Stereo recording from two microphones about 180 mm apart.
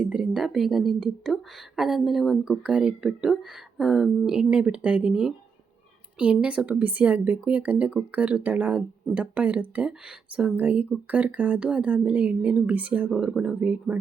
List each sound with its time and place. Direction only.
0.0 s a woman's voice: 5° right (ahead or behind)